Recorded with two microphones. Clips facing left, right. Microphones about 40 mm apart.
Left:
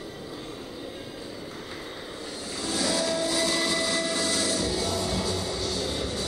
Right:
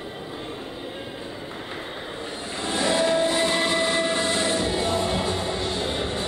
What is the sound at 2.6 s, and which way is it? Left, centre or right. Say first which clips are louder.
Train: right 5 dB; right.